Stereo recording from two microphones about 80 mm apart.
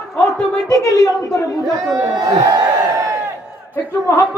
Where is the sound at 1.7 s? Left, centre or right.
Right.